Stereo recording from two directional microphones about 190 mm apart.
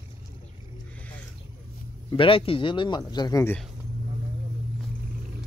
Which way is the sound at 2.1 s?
30° left (ahead or behind).